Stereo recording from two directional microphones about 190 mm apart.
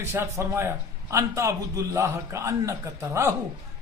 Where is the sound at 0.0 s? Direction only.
15° right (ahead or behind).